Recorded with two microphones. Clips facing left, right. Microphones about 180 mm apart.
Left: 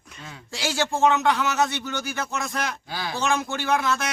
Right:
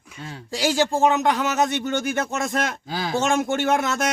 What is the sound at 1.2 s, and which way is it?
Speech, 40° right (ahead or behind).